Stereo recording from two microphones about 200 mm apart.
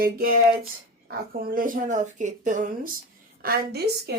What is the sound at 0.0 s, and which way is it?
Speech, 45° right (ahead or behind).